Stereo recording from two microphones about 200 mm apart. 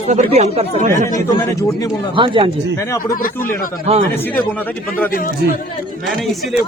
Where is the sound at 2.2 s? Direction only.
25° right (ahead or behind).